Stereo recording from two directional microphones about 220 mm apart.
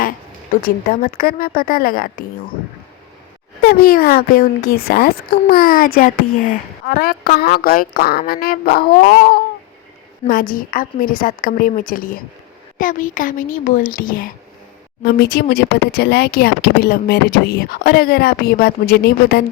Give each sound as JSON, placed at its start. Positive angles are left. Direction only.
{"t": 0.6, "sound": "a woman's voice", "side_deg": 40}
{"t": 3.6, "sound": "a woman's voice", "side_deg": 45}